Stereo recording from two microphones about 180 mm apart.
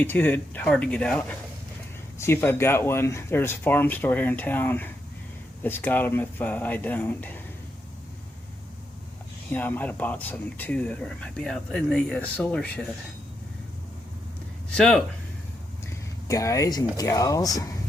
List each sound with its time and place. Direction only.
0.0 s speech: 10° left (ahead or behind)
9.5 s speech: 10° left (ahead or behind)
14.8 s speech: 5° left (ahead or behind)
16.2 s speech: 20° left (ahead or behind)